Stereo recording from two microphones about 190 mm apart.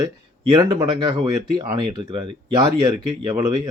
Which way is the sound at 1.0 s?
20° right (ahead or behind).